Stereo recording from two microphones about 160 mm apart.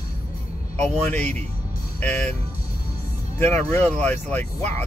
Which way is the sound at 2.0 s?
10° left (ahead or behind).